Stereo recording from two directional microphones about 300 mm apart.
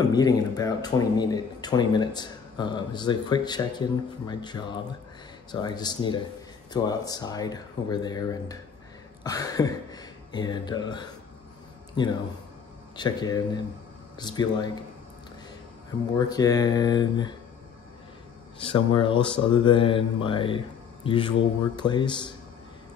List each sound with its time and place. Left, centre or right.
0.0 s speech: centre
16.2 s speech: centre
18.6 s speech: centre